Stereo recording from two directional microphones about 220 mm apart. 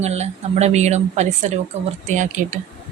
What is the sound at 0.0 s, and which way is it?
A woman's voice, 30° right (ahead or behind).